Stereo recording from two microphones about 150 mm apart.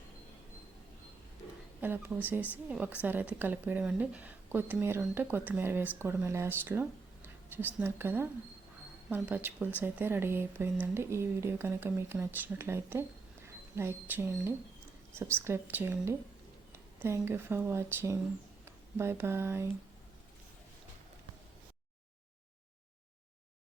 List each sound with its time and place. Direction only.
1.8 s speech: 10° right (ahead or behind)